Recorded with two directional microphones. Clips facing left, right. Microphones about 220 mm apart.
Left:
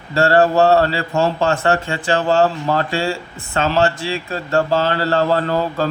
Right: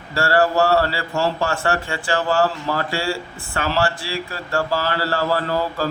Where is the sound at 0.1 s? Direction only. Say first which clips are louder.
Left 4 dB; 25° left (ahead or behind).